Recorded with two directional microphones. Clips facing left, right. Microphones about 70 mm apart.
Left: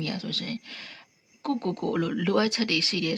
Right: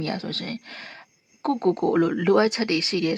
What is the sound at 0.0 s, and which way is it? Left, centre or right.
Speech, right.